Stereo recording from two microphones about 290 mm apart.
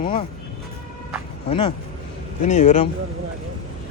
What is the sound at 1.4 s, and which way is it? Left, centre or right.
Speech, centre.